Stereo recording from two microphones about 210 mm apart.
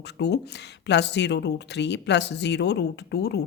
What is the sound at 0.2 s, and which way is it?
A woman's voice, 55° left (ahead or behind).